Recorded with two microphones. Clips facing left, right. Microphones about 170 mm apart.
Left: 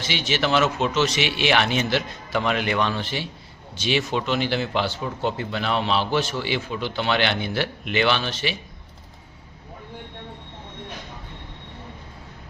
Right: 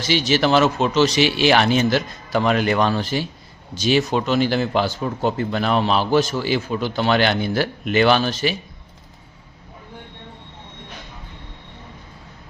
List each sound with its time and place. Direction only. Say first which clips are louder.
0.0 s a man's voice: right 6 dB; 40° right (ahead or behind)